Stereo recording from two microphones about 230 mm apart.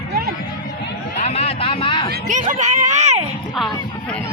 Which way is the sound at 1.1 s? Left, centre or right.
Left.